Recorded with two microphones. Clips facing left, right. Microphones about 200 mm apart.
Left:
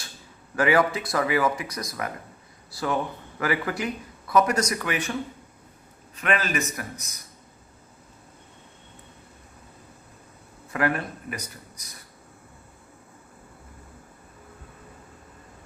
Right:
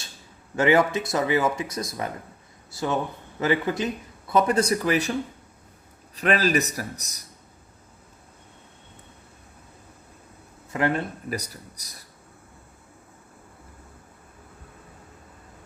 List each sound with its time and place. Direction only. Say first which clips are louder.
0.5 s speech: right 2 dB; 25° right (ahead or behind)
6.1 s speech: right 4 dB; 35° right (ahead or behind)
10.7 s speech: right 1 dB; 25° right (ahead or behind)